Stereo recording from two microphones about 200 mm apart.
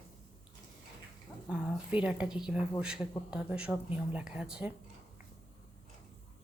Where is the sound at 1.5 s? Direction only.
5° right (ahead or behind).